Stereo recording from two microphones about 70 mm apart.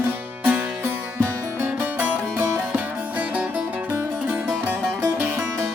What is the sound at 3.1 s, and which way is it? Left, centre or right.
Music, right.